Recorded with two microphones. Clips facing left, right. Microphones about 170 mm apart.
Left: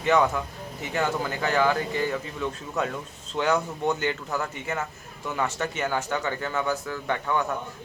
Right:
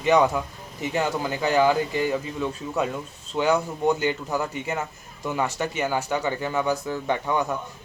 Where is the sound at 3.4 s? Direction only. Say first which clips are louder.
Right 2 dB; 10° right (ahead or behind).